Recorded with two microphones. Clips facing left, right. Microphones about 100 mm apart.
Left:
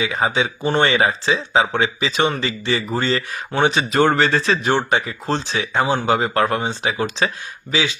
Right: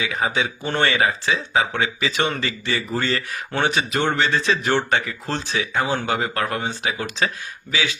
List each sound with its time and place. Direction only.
0.0 s speech: 30° left (ahead or behind)
3.9 s a man's voice: 40° left (ahead or behind)
4.6 s speech: 15° left (ahead or behind)